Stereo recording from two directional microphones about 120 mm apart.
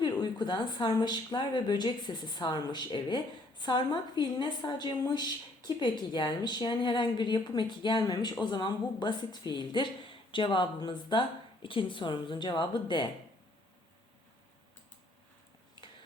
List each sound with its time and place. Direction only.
0.0 s a woman's voice: 40° left (ahead or behind)